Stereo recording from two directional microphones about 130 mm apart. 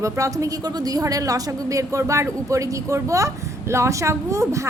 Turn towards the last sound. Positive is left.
turn(degrees=-25)  # may be behind; listen again after turning